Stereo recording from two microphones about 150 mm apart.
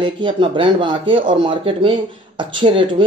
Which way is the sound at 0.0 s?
35° right (ahead or behind).